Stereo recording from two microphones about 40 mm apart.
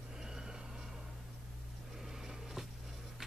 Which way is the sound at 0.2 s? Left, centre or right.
Centre.